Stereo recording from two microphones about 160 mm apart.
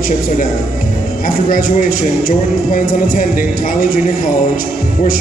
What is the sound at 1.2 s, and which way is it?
Speech, 60° left (ahead or behind).